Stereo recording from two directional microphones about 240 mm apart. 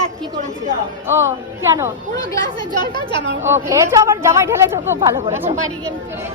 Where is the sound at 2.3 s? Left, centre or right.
Centre.